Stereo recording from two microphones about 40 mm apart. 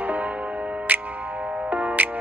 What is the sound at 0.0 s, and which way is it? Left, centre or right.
Music, right.